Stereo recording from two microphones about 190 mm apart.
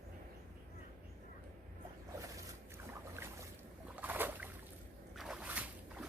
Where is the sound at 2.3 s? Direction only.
15° right (ahead or behind).